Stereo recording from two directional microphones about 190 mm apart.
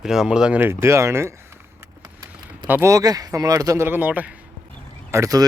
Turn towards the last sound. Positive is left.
turn(degrees=-15)  # may be behind; listen again after turning